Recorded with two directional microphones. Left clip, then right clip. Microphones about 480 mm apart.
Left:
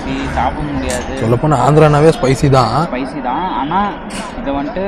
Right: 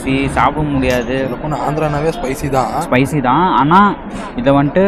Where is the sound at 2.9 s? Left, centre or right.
Right.